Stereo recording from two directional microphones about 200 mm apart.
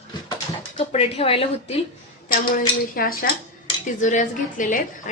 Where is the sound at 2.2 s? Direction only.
45° left (ahead or behind).